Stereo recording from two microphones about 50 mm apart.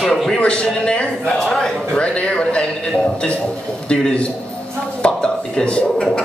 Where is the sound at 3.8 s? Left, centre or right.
Centre.